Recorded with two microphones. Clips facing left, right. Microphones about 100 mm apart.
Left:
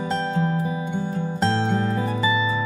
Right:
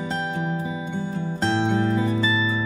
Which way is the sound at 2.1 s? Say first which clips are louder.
Left 1 dB; 20° left (ahead or behind).